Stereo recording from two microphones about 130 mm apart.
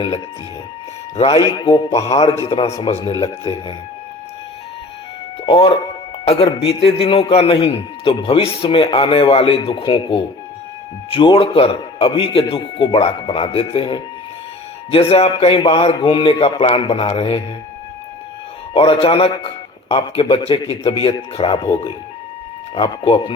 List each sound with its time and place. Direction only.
1.1 s speech: 45° left (ahead or behind)
1.5 s speech: 30° left (ahead or behind)
2.1 s speech: 45° left (ahead or behind)
5.5 s speech: 40° left (ahead or behind)
18.7 s speech: 45° left (ahead or behind)